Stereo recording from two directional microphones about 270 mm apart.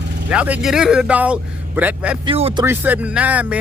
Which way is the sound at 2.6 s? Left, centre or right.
Centre.